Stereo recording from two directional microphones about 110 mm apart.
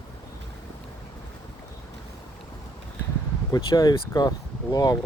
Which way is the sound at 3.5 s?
35° left (ahead or behind).